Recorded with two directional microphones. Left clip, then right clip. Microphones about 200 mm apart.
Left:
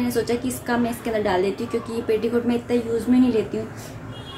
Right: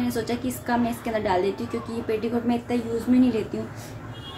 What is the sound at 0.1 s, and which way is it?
A woman's voice, centre (ahead or behind).